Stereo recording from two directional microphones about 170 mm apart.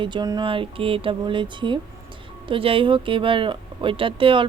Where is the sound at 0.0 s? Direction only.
25° right (ahead or behind).